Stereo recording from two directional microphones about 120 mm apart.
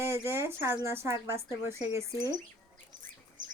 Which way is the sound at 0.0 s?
20° right (ahead or behind).